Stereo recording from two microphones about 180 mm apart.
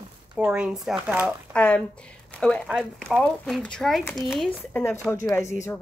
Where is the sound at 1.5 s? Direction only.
5° left (ahead or behind).